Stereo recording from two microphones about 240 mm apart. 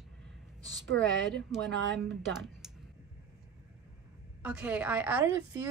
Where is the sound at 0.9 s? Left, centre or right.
Right.